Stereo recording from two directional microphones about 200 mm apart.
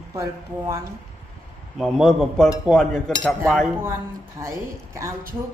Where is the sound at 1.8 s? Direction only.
Centre (ahead or behind).